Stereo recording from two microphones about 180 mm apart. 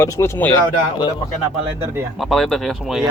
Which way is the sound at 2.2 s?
Centre (ahead or behind).